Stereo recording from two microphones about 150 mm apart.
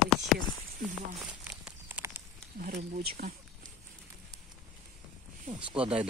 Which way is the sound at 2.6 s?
80° right.